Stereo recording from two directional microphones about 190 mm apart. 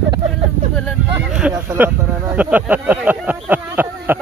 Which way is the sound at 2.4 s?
10° right (ahead or behind).